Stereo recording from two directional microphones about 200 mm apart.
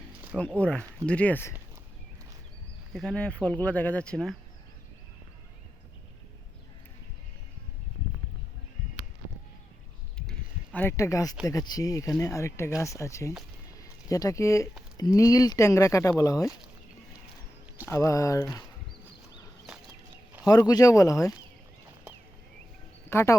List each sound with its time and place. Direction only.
0.6 s speech: 5° left (ahead or behind)
2.9 s speech: 5° left (ahead or behind)
10.8 s speech: 15° left (ahead or behind)
17.8 s speech: 15° left (ahead or behind)
20.4 s speech: 20° left (ahead or behind)
23.0 s speech: 15° left (ahead or behind)